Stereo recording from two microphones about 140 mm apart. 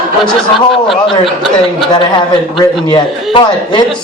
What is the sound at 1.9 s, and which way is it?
A man's voice, 35° left (ahead or behind).